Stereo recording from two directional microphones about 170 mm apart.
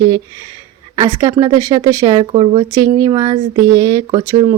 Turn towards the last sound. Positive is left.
turn(degrees=-25)  # may be behind; listen again after turning